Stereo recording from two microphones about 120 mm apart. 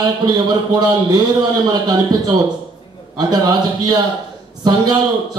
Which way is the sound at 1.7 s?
30° right (ahead or behind).